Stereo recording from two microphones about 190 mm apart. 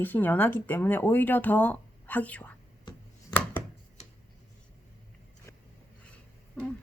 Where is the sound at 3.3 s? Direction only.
10° left (ahead or behind).